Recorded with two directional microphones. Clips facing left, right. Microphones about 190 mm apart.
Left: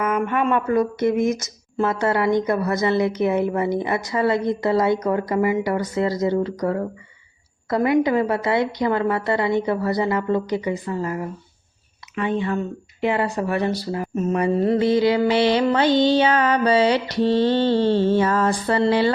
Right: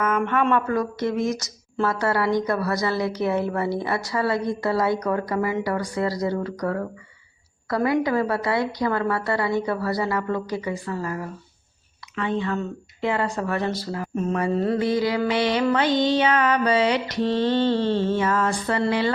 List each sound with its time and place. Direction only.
0.5 s speech: 20° left (ahead or behind)
14.3 s mantra: 20° left (ahead or behind)